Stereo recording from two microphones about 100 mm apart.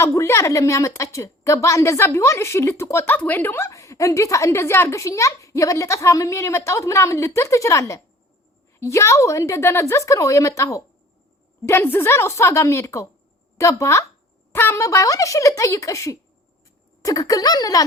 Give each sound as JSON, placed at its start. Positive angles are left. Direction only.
{"t": 0.0, "sound": "a woman's voice", "side_deg": 30}